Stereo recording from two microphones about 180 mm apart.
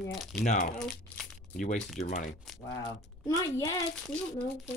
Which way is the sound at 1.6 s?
40° left (ahead or behind).